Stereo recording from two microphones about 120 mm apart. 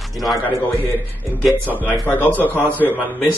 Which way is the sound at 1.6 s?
15° left (ahead or behind).